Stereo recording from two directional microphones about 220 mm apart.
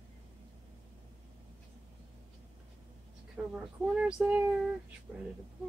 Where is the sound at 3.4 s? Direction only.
10° right (ahead or behind).